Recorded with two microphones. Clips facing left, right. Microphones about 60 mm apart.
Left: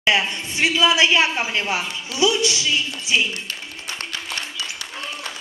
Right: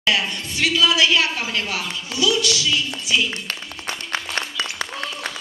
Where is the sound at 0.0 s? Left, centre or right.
Left.